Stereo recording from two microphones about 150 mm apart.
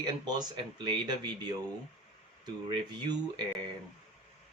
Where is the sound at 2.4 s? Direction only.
30° right (ahead or behind).